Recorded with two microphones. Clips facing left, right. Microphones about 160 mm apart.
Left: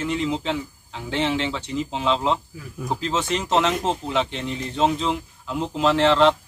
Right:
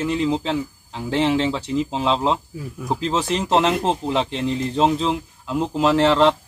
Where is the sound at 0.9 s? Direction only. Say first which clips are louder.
Right 4 dB; 35° right (ahead or behind).